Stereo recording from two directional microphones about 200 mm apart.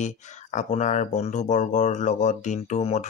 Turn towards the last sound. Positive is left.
turn(degrees=35)  # may be behind; listen again after turning